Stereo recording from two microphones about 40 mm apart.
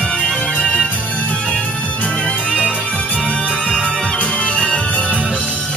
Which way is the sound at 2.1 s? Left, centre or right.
Left.